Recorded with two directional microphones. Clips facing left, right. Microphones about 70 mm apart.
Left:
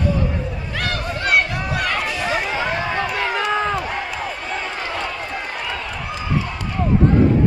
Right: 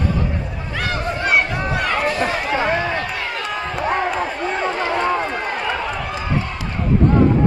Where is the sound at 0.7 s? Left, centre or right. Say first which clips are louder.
Right 3 dB; centre.